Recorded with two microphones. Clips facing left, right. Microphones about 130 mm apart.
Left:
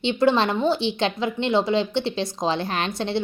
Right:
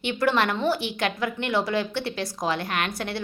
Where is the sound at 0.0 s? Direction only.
20° left (ahead or behind).